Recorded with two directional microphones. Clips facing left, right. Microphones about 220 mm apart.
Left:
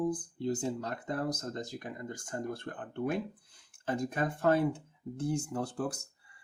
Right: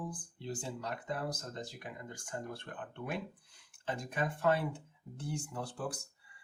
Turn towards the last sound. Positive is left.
turn(degrees=45)  # may be behind; listen again after turning